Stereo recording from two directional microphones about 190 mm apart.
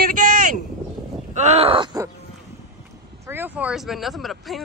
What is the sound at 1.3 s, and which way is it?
Speech, 35° right (ahead or behind).